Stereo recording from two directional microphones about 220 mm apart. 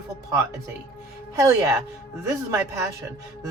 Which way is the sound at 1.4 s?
15° right (ahead or behind).